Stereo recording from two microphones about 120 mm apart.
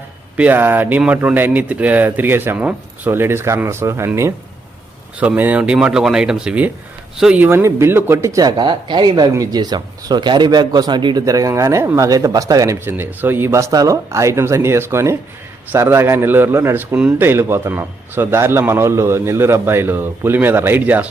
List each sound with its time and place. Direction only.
0.3 s speech: 15° right (ahead or behind)
5.2 s a man's voice: 15° right (ahead or behind); by 12.7 s 30° right (ahead or behind)
12.8 s a man's voice: 15° right (ahead or behind)